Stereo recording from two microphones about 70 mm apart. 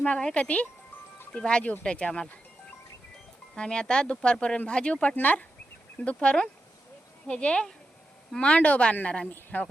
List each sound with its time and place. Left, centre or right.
0.0 s speech: centre
3.5 s speech: centre